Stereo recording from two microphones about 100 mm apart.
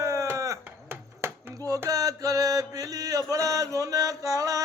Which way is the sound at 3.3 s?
35° right (ahead or behind).